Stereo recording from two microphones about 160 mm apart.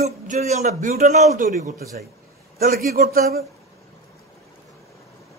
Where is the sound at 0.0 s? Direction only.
45° right (ahead or behind).